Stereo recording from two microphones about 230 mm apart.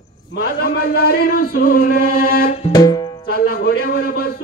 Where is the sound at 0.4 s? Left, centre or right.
Left.